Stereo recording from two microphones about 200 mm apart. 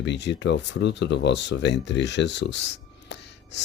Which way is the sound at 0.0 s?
60° left (ahead or behind).